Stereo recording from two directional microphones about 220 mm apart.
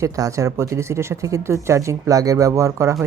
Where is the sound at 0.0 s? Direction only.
15° right (ahead or behind).